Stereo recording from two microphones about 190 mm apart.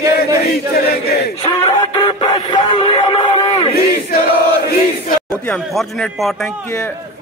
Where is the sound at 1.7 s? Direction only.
20° left (ahead or behind).